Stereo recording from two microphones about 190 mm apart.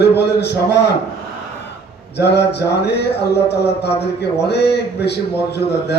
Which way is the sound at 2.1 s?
60° left (ahead or behind).